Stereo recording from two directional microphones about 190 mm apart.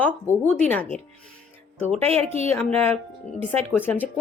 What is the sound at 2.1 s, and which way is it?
Speech, 35° right (ahead or behind).